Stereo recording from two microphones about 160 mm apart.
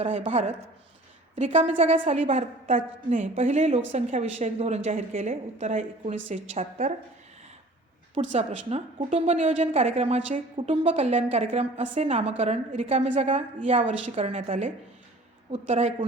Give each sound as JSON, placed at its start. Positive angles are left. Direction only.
{"t": 0.0, "sound": "a woman's voice", "side_deg": -40}
{"t": 8.1, "sound": "a woman's voice", "side_deg": -40}